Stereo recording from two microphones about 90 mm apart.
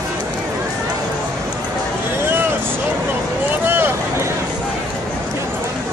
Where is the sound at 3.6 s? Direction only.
25° right (ahead or behind).